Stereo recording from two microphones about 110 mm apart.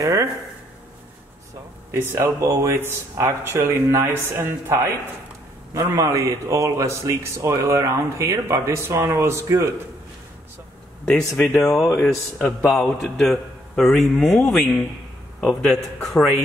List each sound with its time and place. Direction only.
0.0 s speech: 30° right (ahead or behind)
2.1 s a man's voice: 25° right (ahead or behind)
11.1 s a man's voice: 5° left (ahead or behind)
12.6 s a man's voice: centre (ahead or behind)
15.7 s a man's voice: 5° left (ahead or behind)